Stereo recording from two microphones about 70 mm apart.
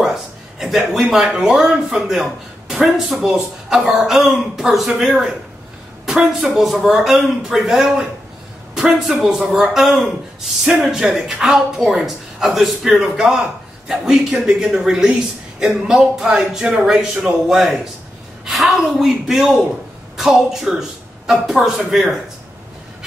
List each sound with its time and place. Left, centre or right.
0.0 s speech: centre
9.1 s a woman's voice: centre